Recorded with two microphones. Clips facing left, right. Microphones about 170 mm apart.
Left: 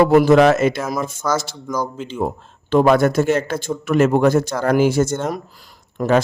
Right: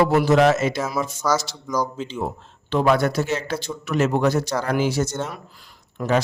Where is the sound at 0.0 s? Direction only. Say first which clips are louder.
Left 5 dB; 55° left (ahead or behind).